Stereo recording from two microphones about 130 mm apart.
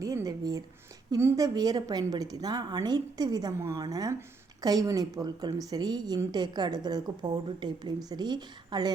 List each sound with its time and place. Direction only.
0.0 s a woman's voice: 25° right (ahead or behind)